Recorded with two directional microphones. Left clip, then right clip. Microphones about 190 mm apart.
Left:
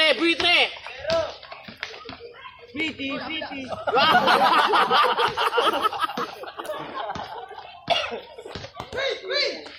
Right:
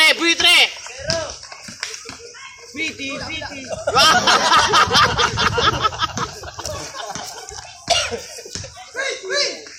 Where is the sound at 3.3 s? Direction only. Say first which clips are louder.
Right 3 dB; 55° right (ahead or behind).